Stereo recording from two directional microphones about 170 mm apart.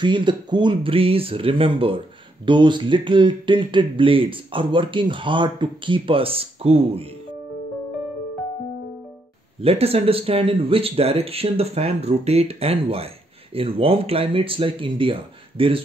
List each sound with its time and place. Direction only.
0.0 s speech: 30° right (ahead or behind)
9.6 s speech: 35° right (ahead or behind)